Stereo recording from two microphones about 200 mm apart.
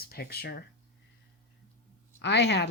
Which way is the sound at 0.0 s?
50° left (ahead or behind).